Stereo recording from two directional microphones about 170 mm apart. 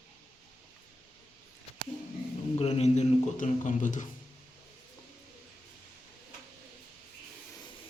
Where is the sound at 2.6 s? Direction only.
40° left (ahead or behind).